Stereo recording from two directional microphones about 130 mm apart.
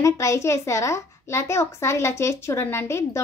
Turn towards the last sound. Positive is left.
turn(degrees=20)  # may be behind; listen again after turning